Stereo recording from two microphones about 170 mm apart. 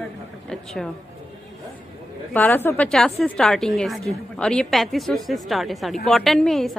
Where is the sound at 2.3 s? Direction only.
10° left (ahead or behind).